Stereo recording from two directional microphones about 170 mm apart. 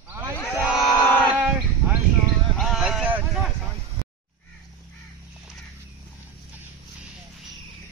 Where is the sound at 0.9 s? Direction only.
15° left (ahead or behind).